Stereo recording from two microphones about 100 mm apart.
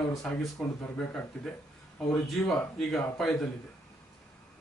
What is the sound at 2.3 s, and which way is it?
A man's voice, 5° left (ahead or behind).